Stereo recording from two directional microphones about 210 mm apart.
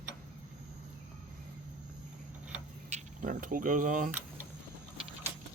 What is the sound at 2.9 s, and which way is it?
Speech, 40° right (ahead or behind).